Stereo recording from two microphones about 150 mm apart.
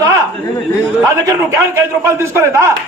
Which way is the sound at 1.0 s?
20° right (ahead or behind).